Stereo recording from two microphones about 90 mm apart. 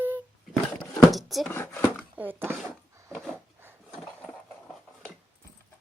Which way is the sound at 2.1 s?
25° right (ahead or behind).